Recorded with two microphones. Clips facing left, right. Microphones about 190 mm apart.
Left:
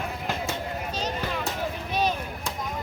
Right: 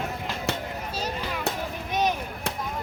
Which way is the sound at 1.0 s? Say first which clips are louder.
Left 1 dB; 10° right (ahead or behind).